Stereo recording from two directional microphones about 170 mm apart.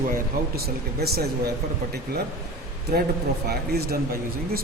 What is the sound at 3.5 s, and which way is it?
Speech, 70° right (ahead or behind).